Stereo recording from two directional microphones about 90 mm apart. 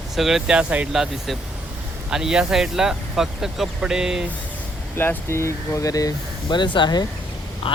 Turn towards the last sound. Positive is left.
turn(degrees=65)  # may be behind; listen again after turning